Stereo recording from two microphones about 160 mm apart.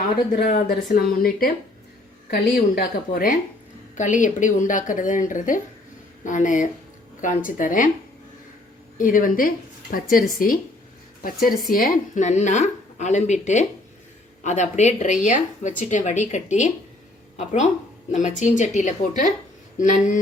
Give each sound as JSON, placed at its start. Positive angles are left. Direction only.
{"t": 0.3, "sound": "a woman's voice", "side_deg": 70}
{"t": 9.0, "sound": "a woman's voice", "side_deg": 55}